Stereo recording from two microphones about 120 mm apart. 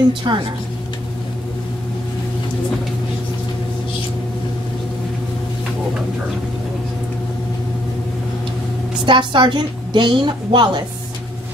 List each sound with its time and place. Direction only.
0.3 s a woman's voice: 40° right (ahead or behind)
9.0 s a woman's voice: 40° right (ahead or behind)